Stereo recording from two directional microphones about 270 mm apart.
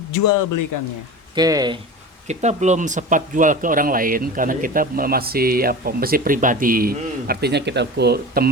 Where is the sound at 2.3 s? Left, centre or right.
Right.